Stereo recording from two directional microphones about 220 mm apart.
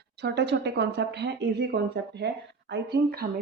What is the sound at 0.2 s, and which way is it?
Speech, 50° right (ahead or behind).